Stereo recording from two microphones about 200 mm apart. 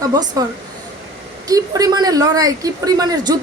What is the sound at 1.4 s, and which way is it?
A woman's voice, 20° right (ahead or behind).